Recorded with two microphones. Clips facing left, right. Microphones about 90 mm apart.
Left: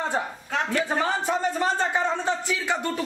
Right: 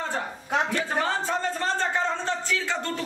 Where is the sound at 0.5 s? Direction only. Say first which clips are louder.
Right 4 dB; 20° right (ahead or behind).